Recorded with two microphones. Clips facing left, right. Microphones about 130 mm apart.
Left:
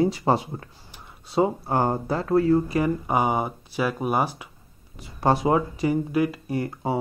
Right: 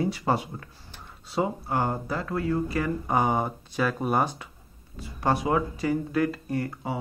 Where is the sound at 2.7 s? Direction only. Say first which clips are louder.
Left 3 dB; 15° left (ahead or behind).